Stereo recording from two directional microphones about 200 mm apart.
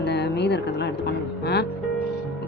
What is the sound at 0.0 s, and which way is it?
Music, 55° left (ahead or behind).